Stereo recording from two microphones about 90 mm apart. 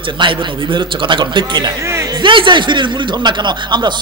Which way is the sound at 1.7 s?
35° right (ahead or behind).